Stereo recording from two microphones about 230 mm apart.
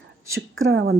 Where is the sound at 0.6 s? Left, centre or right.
Right.